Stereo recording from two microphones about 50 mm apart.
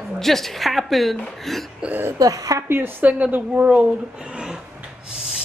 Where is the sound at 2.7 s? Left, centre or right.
Right.